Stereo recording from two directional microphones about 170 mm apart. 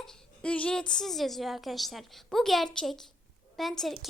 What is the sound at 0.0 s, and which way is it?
A woman's voice, 5° left (ahead or behind).